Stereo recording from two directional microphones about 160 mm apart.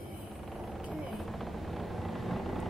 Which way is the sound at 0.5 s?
Centre (ahead or behind).